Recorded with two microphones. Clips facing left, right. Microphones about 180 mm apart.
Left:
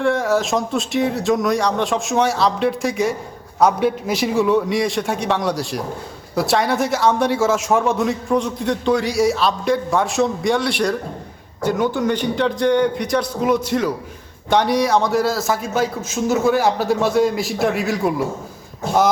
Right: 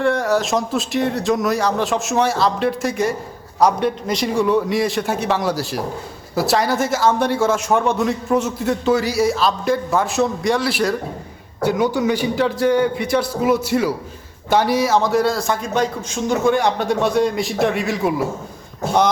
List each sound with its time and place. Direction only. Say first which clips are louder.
0.0 s a man's voice: even; centre (ahead or behind)